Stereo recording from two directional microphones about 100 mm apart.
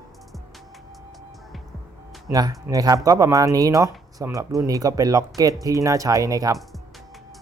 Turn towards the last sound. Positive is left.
turn(degrees=0)  # may be behind; listen again after turning